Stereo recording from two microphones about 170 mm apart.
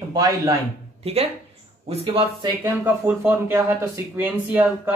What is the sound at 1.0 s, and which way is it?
Speech, 35° right (ahead or behind).